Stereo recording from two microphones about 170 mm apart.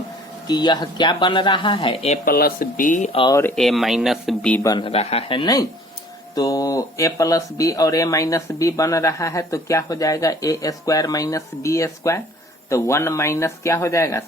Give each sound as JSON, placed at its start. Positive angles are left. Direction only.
{"t": 0.4, "sound": "speech", "side_deg": 25}
{"t": 2.2, "sound": "speech", "side_deg": 60}
{"t": 3.1, "sound": "speech", "side_deg": 30}
{"t": 3.3, "sound": "speech", "side_deg": 10}
{"t": 4.6, "sound": "speech", "side_deg": 20}
{"t": 4.9, "sound": "speech", "side_deg": 35}